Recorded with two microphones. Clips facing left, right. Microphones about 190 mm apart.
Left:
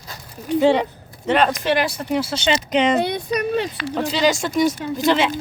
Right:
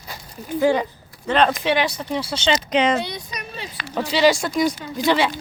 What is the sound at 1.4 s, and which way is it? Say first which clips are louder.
Speech: right 1 dB; centre (ahead or behind).